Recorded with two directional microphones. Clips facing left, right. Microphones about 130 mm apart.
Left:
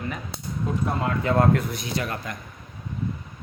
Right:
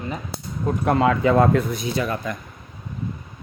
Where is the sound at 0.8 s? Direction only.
90° right.